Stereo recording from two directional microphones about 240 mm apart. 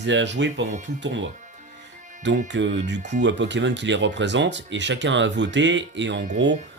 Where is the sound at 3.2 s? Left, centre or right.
Right.